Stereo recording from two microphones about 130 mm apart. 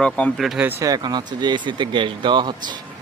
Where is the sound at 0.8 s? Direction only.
30° right (ahead or behind).